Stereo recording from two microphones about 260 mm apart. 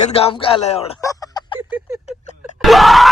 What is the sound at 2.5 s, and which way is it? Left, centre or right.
Groan, centre.